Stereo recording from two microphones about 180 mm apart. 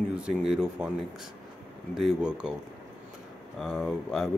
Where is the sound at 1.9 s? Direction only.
5° right (ahead or behind).